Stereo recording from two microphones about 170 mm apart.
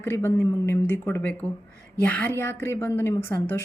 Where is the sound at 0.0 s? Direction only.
15° left (ahead or behind).